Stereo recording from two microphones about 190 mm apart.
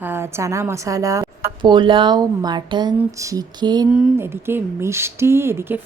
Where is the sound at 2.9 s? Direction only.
15° right (ahead or behind).